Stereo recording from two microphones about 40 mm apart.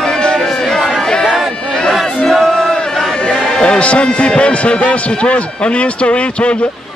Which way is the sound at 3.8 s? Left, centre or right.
Left.